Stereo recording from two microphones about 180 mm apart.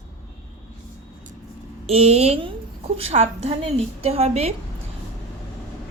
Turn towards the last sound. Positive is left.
turn(degrees=-35)  # may be behind; listen again after turning